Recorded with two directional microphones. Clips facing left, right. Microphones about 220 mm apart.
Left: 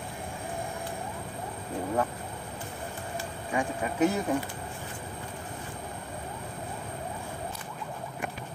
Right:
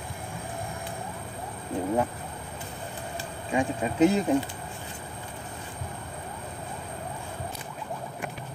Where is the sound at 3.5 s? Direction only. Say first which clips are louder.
Right 4 dB; 25° right (ahead or behind).